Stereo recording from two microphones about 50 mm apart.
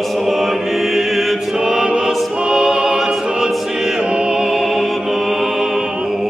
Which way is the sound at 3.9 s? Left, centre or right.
Centre.